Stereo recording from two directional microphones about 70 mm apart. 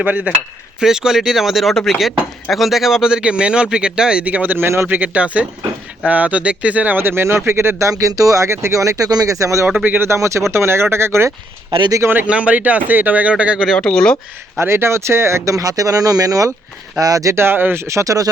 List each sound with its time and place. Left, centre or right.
0.0 s speech: right
0.8 s speech: centre; by 4.9 s right
4.9 s speech: right
7.9 s speech: right
9.6 s speech: right
10.1 s speech: right
12.3 s speech: centre
13.7 s speech: centre
14.6 s speech: right
17.3 s speech: right
17.8 s speech: right